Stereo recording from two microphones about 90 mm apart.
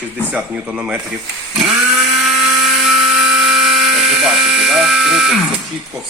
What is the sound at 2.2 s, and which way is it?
Helicopter, 5° right (ahead or behind).